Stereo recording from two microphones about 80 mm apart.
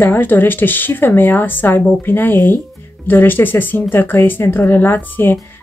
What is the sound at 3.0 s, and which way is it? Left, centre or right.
Speech, left.